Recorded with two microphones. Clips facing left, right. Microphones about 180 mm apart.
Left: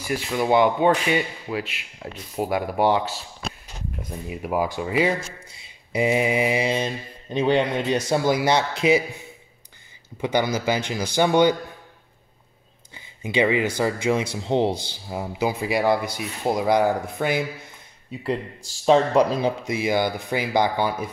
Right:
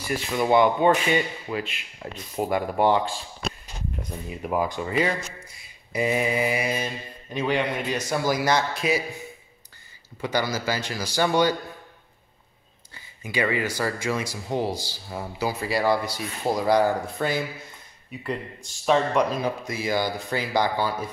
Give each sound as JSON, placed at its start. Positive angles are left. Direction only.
{"t": 0.0, "sound": "speech", "side_deg": 10}
{"t": 5.9, "sound": "speech", "side_deg": 20}
{"t": 10.2, "sound": "speech", "side_deg": 20}
{"t": 12.9, "sound": "a sound", "side_deg": 20}
{"t": 13.7, "sound": "speech", "side_deg": 20}
{"t": 18.2, "sound": "speech", "side_deg": 30}